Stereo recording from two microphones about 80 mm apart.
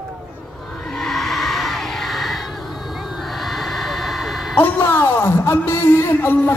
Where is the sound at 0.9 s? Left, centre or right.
Centre.